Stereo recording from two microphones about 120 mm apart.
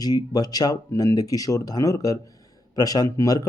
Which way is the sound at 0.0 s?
35° left (ahead or behind).